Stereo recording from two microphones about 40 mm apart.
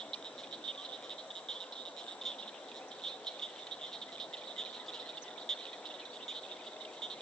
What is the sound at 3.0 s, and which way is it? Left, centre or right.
Cricket, centre.